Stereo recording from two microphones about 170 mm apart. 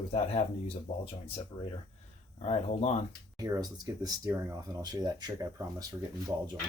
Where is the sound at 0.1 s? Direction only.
35° left (ahead or behind).